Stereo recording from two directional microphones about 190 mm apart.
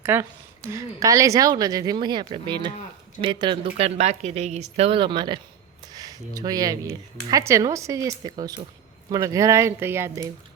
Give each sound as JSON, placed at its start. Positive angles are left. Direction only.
{"t": 0.0, "sound": "speech", "side_deg": -10}